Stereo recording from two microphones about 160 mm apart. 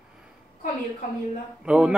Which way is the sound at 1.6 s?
5° right (ahead or behind).